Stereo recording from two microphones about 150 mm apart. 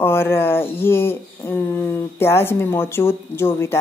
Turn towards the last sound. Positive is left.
turn(degrees=15)  # may be behind; listen again after turning